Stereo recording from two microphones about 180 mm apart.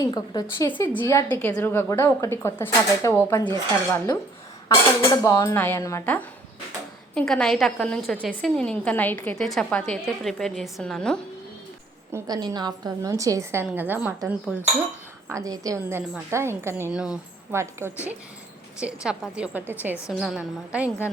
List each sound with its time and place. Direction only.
0.0 s a woman's voice: 20° left (ahead or behind)
5.2 s a woman's voice: 15° left (ahead or behind)
12.1 s a woman's voice: 20° right (ahead or behind); by 17.2 s 5° right (ahead or behind)
17.5 s a woman's voice: 15° right (ahead or behind)